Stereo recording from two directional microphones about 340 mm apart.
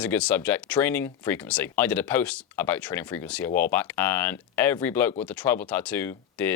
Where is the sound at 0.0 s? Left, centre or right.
Centre.